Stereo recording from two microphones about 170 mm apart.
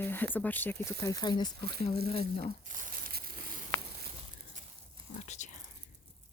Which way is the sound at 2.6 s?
50° right (ahead or behind).